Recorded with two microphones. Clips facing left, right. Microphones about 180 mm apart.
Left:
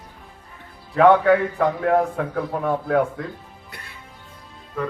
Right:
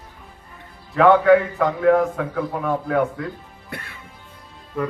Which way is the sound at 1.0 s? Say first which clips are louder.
Right 1 dB; 35° left (ahead or behind).